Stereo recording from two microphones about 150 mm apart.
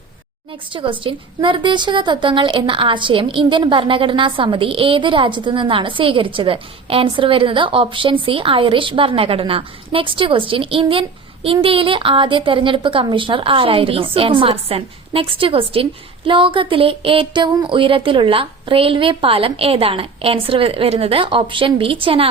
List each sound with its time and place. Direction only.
0.7 s a woman's voice: 35° right (ahead or behind)